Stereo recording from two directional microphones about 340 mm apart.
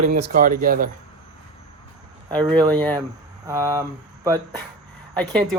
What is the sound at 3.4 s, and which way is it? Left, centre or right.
Speech, centre.